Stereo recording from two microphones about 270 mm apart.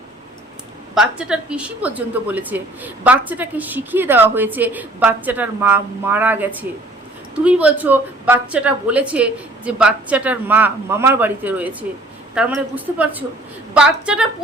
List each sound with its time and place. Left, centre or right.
0.9 s a woman's voice: centre